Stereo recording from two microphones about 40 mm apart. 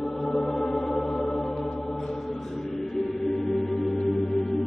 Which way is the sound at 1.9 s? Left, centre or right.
Centre.